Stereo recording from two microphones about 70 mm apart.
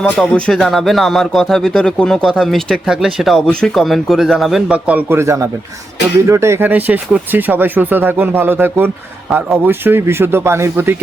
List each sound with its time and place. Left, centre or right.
0.0 s speech: centre
0.5 s speech: centre
2.8 s speech: centre
4.7 s speech: centre
5.0 s speech: right
6.7 s speech: right